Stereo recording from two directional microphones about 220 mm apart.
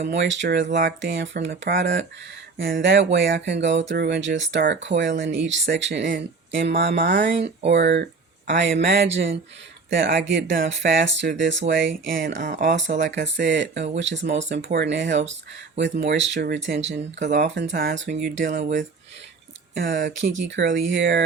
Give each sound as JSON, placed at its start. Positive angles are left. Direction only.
{"t": 0.0, "sound": "speech", "side_deg": -50}
{"t": 7.1, "sound": "speech", "side_deg": -40}
{"t": 7.7, "sound": "speech", "side_deg": -50}
{"t": 12.4, "sound": "speech", "side_deg": -35}
{"t": 12.6, "sound": "speech", "side_deg": -55}
{"t": 17.2, "sound": "speech", "side_deg": -35}
{"t": 17.5, "sound": "speech", "side_deg": -50}
{"t": 19.7, "sound": "speech", "side_deg": -55}